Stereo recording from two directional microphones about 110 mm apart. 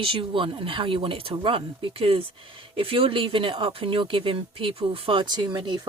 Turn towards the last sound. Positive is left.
turn(degrees=-45)  # may be behind; listen again after turning